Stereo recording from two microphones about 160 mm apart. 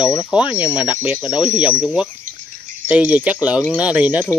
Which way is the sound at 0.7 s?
30° left (ahead or behind).